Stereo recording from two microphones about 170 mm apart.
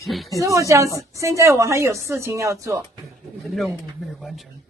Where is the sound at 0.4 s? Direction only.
20° right (ahead or behind).